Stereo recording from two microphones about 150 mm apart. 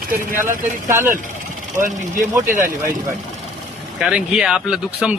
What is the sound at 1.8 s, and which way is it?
Speech, 60° right (ahead or behind).